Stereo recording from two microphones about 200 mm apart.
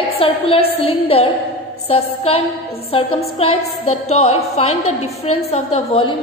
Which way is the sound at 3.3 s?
30° left (ahead or behind).